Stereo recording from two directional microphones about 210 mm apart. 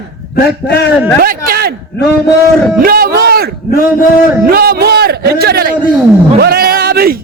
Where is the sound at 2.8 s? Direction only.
45° right (ahead or behind).